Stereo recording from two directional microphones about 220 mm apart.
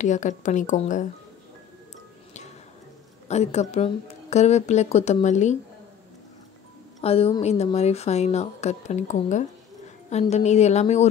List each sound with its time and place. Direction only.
0.0 s speech: 35° left (ahead or behind)
3.3 s speech: 30° left (ahead or behind)
7.0 s speech: 25° left (ahead or behind)